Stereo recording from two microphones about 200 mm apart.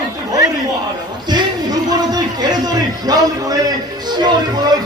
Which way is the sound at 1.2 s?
20° right (ahead or behind).